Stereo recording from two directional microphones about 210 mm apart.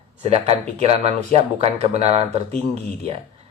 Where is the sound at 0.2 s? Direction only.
30° right (ahead or behind).